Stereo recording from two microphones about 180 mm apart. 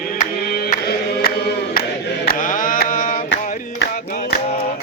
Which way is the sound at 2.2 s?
50° left (ahead or behind).